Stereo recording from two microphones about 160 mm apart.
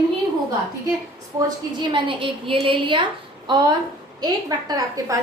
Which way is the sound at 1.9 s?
30° right (ahead or behind).